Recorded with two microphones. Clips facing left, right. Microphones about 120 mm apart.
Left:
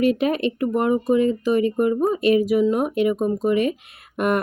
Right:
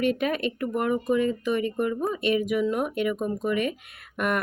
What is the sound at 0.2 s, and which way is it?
A woman's voice, 35° left (ahead or behind).